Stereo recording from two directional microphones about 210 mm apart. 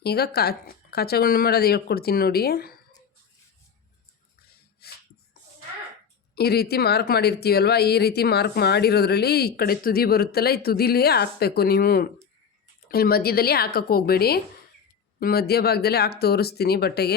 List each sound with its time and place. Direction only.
0.0 s speech: 50° left (ahead or behind)
4.8 s a sound: 50° left (ahead or behind)
6.3 s speech: 50° left (ahead or behind)